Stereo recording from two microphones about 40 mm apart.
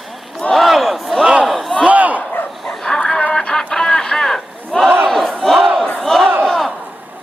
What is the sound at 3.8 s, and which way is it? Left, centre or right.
Battle cry, centre.